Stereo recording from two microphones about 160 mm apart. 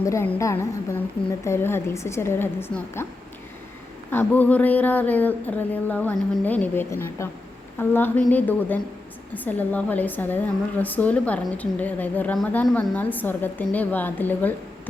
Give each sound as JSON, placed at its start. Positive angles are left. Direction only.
{"t": 0.0, "sound": "a woman's voice", "side_deg": 15}
{"t": 4.1, "sound": "a woman's voice", "side_deg": 10}